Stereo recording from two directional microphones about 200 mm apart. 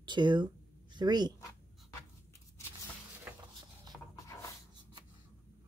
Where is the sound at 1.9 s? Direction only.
15° left (ahead or behind).